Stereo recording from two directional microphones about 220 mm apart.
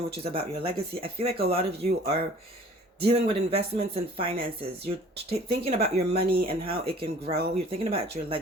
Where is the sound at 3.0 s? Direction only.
25° right (ahead or behind).